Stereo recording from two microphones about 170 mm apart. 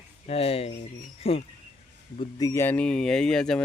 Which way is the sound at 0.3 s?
35° left (ahead or behind).